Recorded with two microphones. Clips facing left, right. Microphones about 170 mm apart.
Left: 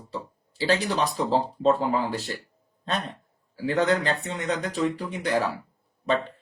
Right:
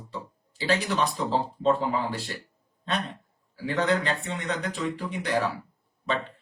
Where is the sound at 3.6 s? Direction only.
40° left (ahead or behind).